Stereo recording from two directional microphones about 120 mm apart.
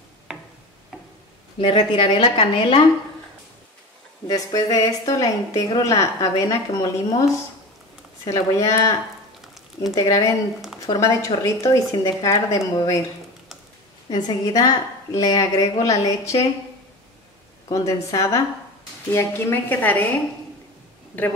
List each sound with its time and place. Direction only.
1.6 s a woman's voice: 45° left (ahead or behind)
4.3 s a woman's voice: 30° left (ahead or behind)
8.3 s a woman's voice: 25° left (ahead or behind)
9.9 s a woman's voice: 30° left (ahead or behind)
14.0 s a woman's voice: 40° left (ahead or behind)
14.5 s a woman's voice: 30° left (ahead or behind)
17.6 s a woman's voice: 25° left (ahead or behind)
21.1 s a woman's voice: 10° left (ahead or behind)